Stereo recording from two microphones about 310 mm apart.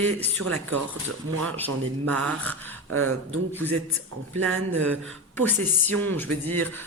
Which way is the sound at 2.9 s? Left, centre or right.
Right.